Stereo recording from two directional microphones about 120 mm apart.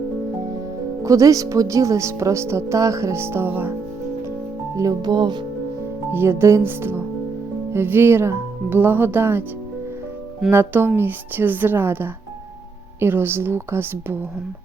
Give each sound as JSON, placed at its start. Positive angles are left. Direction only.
{"t": 1.0, "sound": "a woman's voice", "side_deg": -25}
{"t": 4.8, "sound": "speech", "side_deg": -30}
{"t": 6.1, "sound": "a woman's voice", "side_deg": -20}
{"t": 10.5, "sound": "a woman's voice", "side_deg": -20}